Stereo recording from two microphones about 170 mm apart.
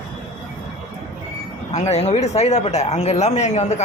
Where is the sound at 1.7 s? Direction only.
40° left (ahead or behind).